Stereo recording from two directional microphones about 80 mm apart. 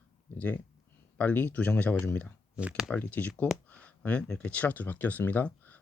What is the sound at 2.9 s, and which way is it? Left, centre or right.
Speech, centre.